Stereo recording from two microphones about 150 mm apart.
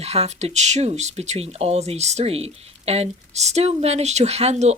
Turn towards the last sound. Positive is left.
turn(degrees=-45)  # may be behind; listen again after turning